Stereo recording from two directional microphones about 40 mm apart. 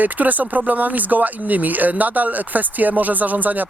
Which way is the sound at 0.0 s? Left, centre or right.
Right.